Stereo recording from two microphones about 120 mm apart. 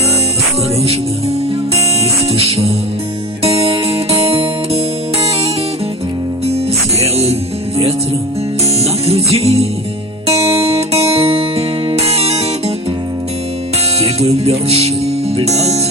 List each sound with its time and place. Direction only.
2.3 s music: 55° right (ahead or behind)
7.0 s music: 60° right (ahead or behind)
8.8 s music: 55° right (ahead or behind)
14.0 s music: 60° right (ahead or behind)